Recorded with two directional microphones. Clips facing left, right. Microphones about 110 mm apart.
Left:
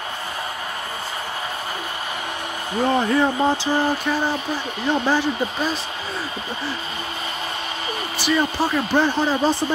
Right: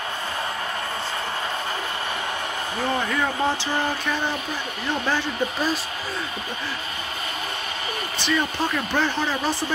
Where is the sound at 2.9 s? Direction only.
30° left (ahead or behind).